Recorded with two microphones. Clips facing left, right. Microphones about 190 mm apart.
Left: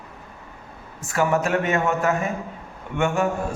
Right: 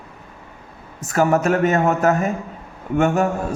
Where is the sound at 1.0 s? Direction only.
40° right (ahead or behind).